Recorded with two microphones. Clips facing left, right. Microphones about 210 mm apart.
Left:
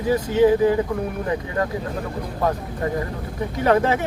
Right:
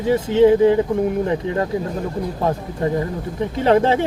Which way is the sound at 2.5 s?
25° right (ahead or behind).